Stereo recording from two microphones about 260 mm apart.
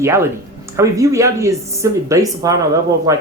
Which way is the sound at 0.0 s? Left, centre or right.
Centre.